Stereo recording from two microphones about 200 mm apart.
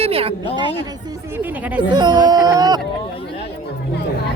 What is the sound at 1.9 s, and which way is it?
Speech, 20° right (ahead or behind).